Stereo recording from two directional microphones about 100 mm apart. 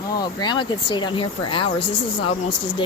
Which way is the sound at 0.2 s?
45° left (ahead or behind).